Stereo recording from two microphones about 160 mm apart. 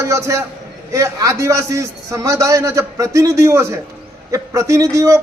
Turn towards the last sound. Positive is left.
turn(degrees=-20)  # may be behind; listen again after turning